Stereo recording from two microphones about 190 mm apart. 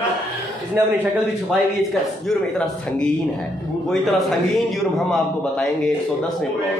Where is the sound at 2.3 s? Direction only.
5° left (ahead or behind).